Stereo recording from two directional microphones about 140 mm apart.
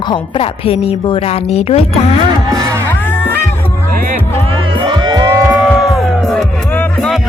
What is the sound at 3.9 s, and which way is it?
Music, 90° right.